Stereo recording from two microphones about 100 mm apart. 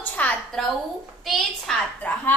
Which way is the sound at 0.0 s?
15° left (ahead or behind).